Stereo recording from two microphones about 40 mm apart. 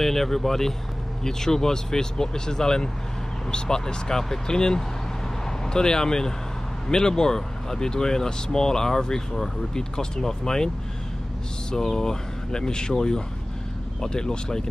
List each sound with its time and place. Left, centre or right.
0.0 s speech: centre
11.7 s speech: centre